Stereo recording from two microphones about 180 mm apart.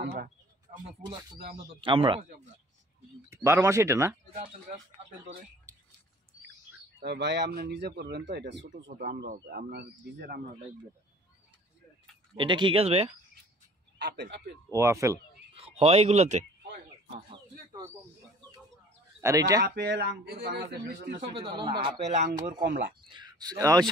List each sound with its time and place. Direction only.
0.0 s speech: 55° right (ahead or behind)
1.8 s speech: 30° right (ahead or behind)
3.3 s speech: 15° right (ahead or behind)
7.0 s speech: 70° right (ahead or behind)
12.4 s speech: 25° right (ahead or behind)
13.9 s speech: 70° right (ahead or behind)
14.7 s speech: 15° right (ahead or behind)
15.5 s speech: 35° right (ahead or behind)
17.3 s a sound: 25° right (ahead or behind)
19.2 s speech: 20° right (ahead or behind)
19.6 s speech: 65° right (ahead or behind)
21.3 s speech: 25° right (ahead or behind)
22.6 s speech: 50° right (ahead or behind)
23.0 s speech: 25° right (ahead or behind)